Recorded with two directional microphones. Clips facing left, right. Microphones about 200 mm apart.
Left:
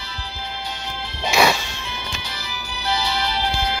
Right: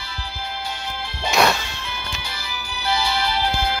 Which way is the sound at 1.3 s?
Centre (ahead or behind).